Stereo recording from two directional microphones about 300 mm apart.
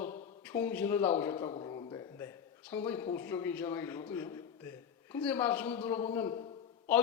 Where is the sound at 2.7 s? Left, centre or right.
Centre.